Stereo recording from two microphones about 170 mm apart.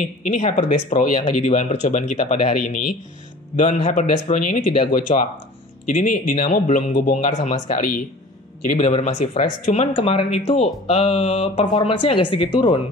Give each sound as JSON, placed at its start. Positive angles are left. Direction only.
{"t": 0.0, "sound": "speech", "side_deg": 50}